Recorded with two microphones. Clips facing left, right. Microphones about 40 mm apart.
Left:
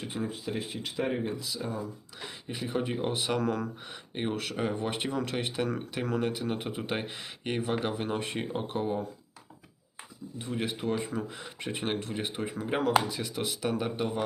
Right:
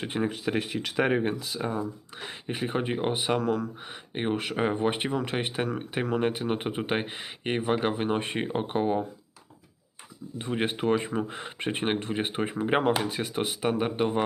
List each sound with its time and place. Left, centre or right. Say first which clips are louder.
0.0 s speech: right 6 dB; right
3.4 s speech: right 3 dB; centre
4.1 s speech: right 4 dB; right
10.3 s speech: right 5 dB; right